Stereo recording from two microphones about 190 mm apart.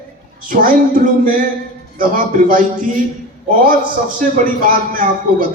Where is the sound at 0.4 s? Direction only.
45° right (ahead or behind).